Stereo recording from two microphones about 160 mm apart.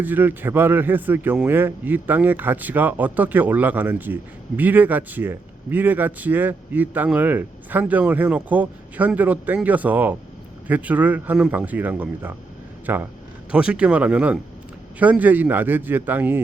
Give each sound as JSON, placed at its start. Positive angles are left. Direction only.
{"t": 0.0, "sound": "speech", "side_deg": -10}